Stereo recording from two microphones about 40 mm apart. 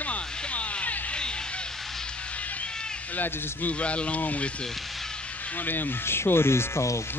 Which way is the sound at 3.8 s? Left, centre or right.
Left.